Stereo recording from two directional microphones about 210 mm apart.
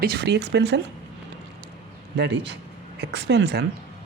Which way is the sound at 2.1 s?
55° right (ahead or behind).